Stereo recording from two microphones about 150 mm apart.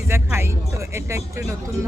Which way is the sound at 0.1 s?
15° right (ahead or behind).